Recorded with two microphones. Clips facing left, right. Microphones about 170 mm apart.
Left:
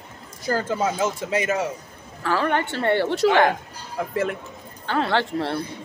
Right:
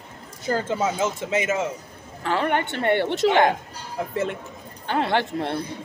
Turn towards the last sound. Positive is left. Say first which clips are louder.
# left 1 dB
turn(degrees=-20)  # may be behind; listen again after turning